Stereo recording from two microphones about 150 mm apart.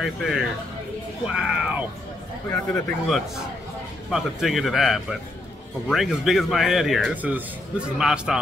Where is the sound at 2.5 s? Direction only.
5° left (ahead or behind).